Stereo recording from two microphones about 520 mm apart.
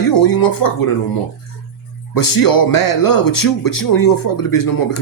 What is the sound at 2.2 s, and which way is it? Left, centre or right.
Speech, left.